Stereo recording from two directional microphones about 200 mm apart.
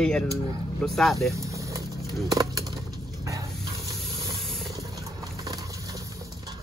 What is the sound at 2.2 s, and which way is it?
Speech, 20° right (ahead or behind).